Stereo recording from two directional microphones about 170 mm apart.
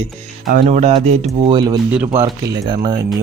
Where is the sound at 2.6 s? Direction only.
25° right (ahead or behind).